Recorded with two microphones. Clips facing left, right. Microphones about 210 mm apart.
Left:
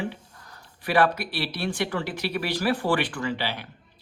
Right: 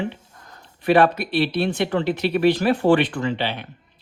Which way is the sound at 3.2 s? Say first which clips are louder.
Right 5 dB; 25° right (ahead or behind).